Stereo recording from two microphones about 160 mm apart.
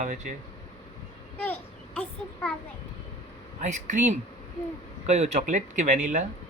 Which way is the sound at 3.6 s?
50° right (ahead or behind).